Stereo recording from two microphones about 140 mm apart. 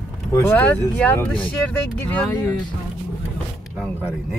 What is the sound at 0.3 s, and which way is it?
Speech, 15° left (ahead or behind).